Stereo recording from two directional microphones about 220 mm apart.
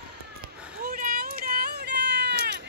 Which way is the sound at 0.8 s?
40° right (ahead or behind).